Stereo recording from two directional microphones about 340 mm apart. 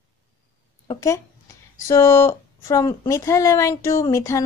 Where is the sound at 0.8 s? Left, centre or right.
Centre.